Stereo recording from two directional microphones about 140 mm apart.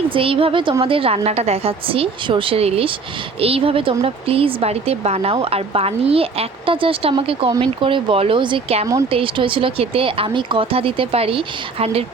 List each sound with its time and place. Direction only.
0.1 s speech: 40° right (ahead or behind)